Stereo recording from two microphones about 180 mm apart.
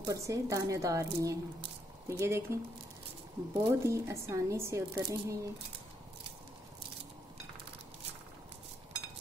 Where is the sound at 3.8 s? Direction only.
15° right (ahead or behind).